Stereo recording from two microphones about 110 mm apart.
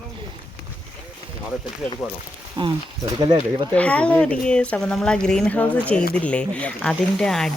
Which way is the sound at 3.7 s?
10° left (ahead or behind).